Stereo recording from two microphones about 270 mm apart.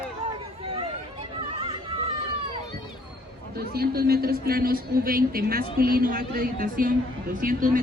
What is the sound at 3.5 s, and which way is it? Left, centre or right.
A man's voice, right.